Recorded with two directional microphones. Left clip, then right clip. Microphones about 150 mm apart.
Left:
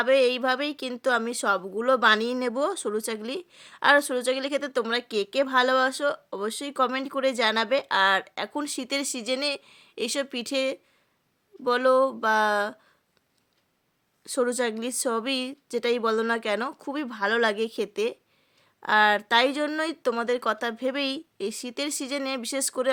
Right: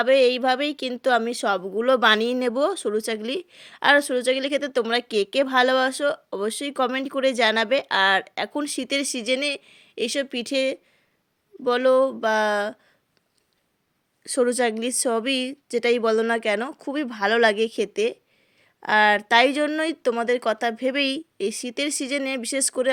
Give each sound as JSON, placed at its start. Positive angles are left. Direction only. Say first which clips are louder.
{"t": 0.0, "sound": "a woman's voice", "louder": "right 3 dB", "side_deg": -10}
{"t": 14.3, "sound": "a woman's voice", "louder": "right 4 dB", "side_deg": -20}